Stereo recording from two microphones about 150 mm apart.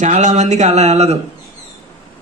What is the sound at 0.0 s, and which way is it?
Speech, 55° right (ahead or behind).